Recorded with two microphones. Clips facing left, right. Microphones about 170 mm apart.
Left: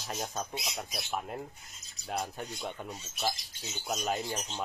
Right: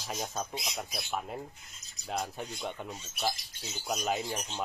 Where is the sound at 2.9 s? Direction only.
Centre (ahead or behind).